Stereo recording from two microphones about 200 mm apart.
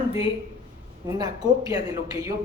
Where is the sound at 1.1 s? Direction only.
20° right (ahead or behind).